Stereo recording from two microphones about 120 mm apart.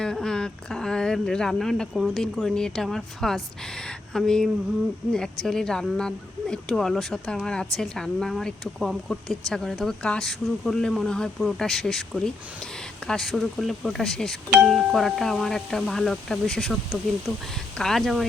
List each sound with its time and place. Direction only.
0.0 s speech: 5° left (ahead or behind)